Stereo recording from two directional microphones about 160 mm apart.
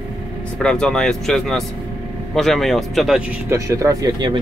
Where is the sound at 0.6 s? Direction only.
5° left (ahead or behind).